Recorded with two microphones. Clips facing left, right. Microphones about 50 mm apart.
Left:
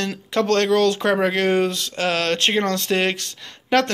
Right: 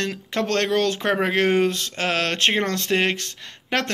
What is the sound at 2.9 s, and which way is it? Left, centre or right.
Speech, centre.